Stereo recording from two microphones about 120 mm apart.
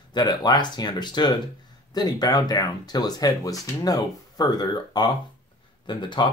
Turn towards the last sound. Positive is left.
turn(degrees=40)  # may be behind; listen again after turning